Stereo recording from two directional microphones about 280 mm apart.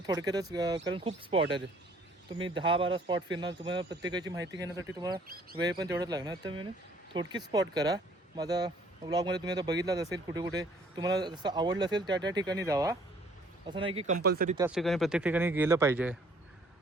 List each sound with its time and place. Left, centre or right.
0.0 s speech: centre
14.2 s speech: right
14.7 s speech: centre